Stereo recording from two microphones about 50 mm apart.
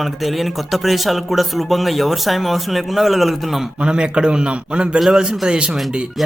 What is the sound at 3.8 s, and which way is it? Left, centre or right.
A man's voice, centre.